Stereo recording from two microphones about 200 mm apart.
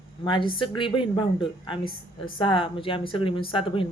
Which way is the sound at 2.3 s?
25° left (ahead or behind).